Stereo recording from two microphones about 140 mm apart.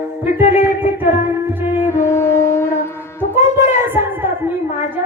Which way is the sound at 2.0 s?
20° left (ahead or behind).